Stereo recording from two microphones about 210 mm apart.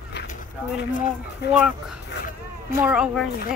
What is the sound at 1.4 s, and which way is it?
Speech, 50° left (ahead or behind).